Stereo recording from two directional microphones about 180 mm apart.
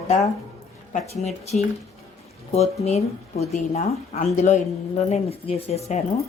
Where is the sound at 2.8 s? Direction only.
35° left (ahead or behind).